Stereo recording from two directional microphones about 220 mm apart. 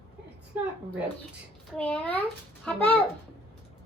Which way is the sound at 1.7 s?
5° left (ahead or behind).